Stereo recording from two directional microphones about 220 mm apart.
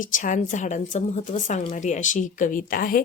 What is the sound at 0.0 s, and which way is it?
A woman's voice, 35° left (ahead or behind).